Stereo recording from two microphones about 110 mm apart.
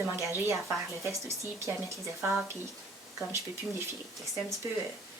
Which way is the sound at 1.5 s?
25° right (ahead or behind).